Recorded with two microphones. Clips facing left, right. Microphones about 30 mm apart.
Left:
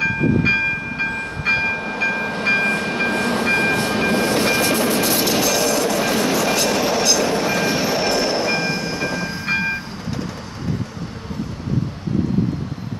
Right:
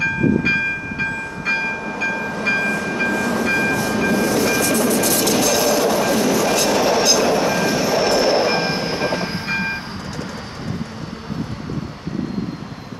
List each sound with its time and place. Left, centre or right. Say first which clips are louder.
0.0 s train: even; centre
1.4 s train: left 2 dB; left
1.8 s train: left 1 dB; left
5.0 s music: right 1 dB; centre
5.5 s train: right 2 dB; centre
6.0 s train: right 1 dB; centre
7.4 s vehicle: right 1 dB; centre
8.0 s train: right 3 dB; centre
8.4 s train: right 2 dB; centre; by 9.4 s right